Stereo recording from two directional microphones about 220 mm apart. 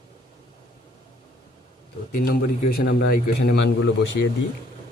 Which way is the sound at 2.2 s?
45° left (ahead or behind).